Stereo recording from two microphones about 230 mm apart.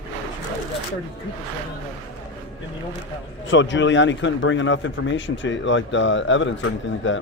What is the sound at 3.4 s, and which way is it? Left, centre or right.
A man's voice, left.